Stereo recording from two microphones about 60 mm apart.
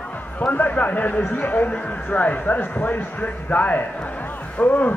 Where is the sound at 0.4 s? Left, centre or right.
Left.